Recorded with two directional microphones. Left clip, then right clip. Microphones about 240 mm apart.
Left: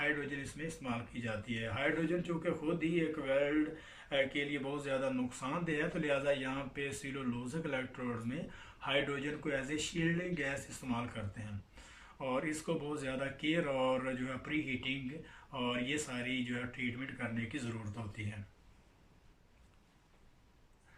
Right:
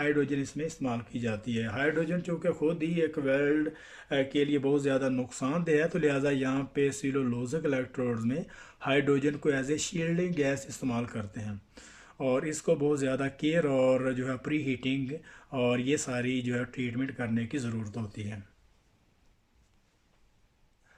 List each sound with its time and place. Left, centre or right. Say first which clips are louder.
0.0 s speech: right 8 dB; right
12.2 s speech: right 8 dB; right